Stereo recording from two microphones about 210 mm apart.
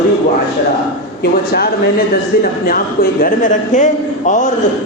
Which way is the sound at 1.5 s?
50° left (ahead or behind).